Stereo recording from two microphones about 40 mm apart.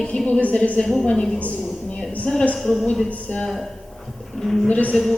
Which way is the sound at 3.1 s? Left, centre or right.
Left.